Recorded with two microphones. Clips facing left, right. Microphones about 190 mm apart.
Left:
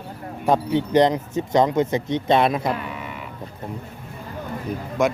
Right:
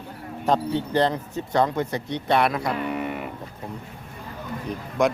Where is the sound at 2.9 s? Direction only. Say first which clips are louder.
Right 6 dB; 55° right (ahead or behind).